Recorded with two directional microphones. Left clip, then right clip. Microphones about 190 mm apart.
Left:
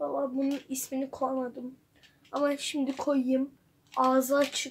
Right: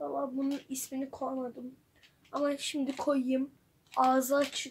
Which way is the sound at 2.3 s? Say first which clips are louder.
Left 3 dB; centre (ahead or behind).